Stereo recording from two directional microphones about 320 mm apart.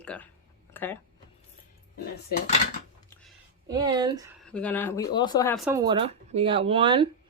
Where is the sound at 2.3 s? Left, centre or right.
Left.